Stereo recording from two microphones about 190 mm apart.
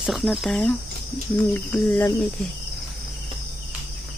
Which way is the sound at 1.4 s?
10° left (ahead or behind).